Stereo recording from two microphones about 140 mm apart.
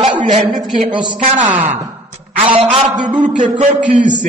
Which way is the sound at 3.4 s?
60° right (ahead or behind).